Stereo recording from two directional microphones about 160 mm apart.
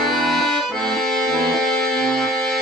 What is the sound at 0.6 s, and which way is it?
Accordion, centre (ahead or behind).